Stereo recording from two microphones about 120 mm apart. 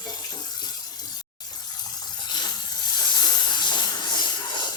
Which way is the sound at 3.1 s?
35° left (ahead or behind).